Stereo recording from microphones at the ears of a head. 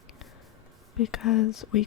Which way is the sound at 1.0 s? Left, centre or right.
Left.